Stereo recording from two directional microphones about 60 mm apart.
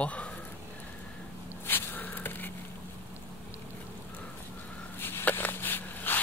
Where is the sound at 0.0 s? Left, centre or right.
Left.